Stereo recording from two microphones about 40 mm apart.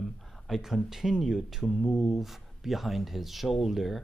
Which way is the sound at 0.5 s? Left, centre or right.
Centre.